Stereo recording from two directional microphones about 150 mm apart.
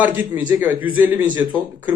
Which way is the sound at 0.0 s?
10° right (ahead or behind).